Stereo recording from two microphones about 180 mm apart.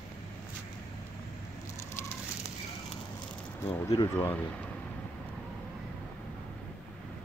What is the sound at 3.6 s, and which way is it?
Speech, 15° left (ahead or behind).